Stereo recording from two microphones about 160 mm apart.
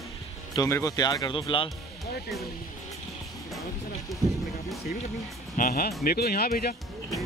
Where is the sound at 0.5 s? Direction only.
20° left (ahead or behind).